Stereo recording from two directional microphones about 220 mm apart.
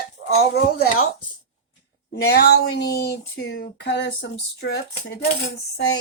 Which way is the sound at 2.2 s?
50° left (ahead or behind).